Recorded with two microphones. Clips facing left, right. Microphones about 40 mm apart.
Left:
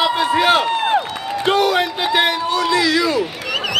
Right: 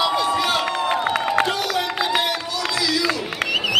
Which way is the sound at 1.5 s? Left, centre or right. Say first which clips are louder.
Left 7 dB; left.